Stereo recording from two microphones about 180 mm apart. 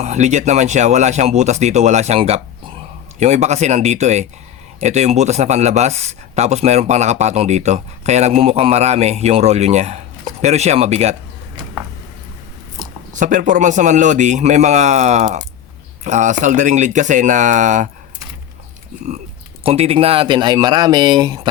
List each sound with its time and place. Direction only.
0.0 s speech: 40° right (ahead or behind)
12.8 s speech: 45° right (ahead or behind)
19.6 s speech: 35° right (ahead or behind)